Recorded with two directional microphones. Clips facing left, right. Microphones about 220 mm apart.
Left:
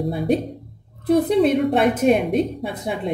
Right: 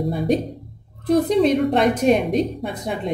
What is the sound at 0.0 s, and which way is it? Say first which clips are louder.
A woman's voice: even; centre (ahead or behind).